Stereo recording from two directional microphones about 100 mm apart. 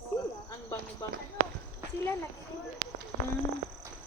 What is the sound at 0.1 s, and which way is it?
Snake, 40° left (ahead or behind).